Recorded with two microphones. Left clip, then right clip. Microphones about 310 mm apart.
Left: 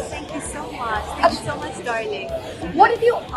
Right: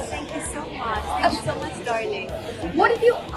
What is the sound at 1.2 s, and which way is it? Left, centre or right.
Speech, centre.